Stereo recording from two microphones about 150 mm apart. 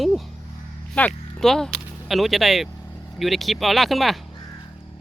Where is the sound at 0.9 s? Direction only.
5° left (ahead or behind).